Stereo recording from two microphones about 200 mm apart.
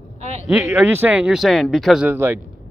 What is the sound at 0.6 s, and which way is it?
Speech, 10° right (ahead or behind).